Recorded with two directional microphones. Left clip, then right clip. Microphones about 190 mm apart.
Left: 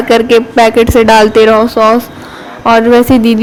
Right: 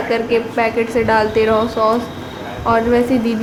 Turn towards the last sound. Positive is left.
turn(degrees=45)  # may be behind; listen again after turning